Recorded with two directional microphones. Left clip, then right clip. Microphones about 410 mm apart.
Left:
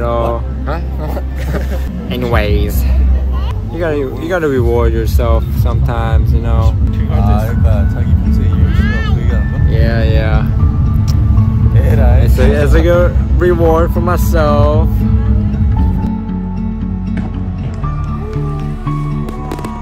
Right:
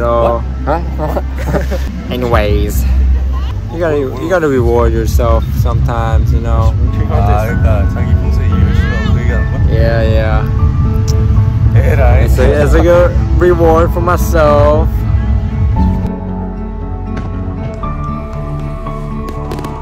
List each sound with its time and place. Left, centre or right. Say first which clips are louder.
0.0 s vehicle: right 4 dB; centre
2.0 s speech: right 3 dB; centre
3.8 s speech: right 3 dB; centre
6.6 s music: right 2 dB; centre
8.6 s music: even; centre
9.7 s speech: right 4 dB; centre
11.8 s music: right 4 dB; centre
12.5 s speech: right 4 dB; centre